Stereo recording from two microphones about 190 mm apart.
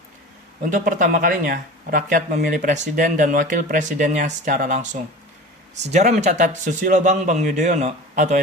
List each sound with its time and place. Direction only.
0.6 s speech: 45° right (ahead or behind)